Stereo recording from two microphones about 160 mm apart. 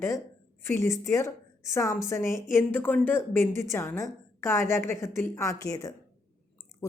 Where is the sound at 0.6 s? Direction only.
15° left (ahead or behind).